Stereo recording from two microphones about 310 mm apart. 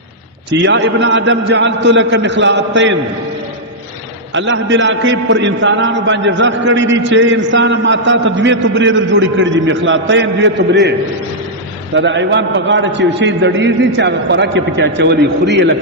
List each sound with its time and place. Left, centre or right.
0.6 s a man's voice: right
4.4 s a man's voice: right
11.9 s a man's voice: right